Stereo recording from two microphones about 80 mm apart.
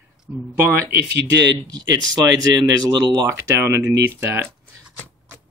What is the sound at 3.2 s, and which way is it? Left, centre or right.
Speech, right.